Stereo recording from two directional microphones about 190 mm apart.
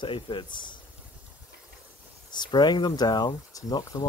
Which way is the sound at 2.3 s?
25° left (ahead or behind).